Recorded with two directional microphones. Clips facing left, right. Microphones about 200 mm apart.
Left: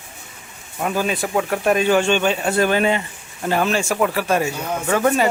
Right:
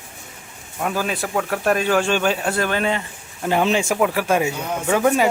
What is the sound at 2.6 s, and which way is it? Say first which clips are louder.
Speech: left 4 dB; 10° left (ahead or behind).